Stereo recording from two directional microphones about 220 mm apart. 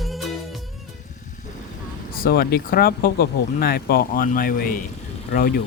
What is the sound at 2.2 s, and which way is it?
Speech, 45° left (ahead or behind).